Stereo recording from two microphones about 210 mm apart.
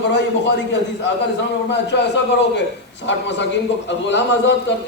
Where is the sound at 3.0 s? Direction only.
55° left (ahead or behind).